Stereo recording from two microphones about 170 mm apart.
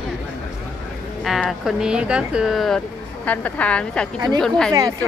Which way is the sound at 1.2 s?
Centre (ahead or behind).